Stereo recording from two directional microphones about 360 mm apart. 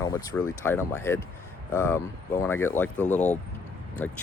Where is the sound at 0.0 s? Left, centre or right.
Centre.